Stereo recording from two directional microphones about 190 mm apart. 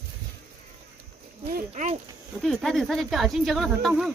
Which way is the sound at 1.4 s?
45° right (ahead or behind).